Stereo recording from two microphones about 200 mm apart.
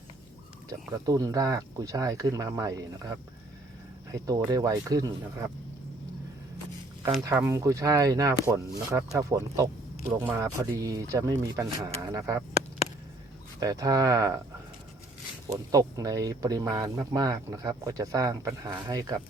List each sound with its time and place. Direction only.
1.0 s speech: 15° right (ahead or behind)
7.3 s speech: 15° right (ahead or behind)
13.6 s speech: 20° right (ahead or behind)
15.4 s speech: 15° right (ahead or behind)